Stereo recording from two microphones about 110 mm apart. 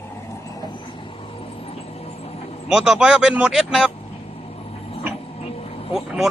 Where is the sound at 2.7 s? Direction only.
5° right (ahead or behind).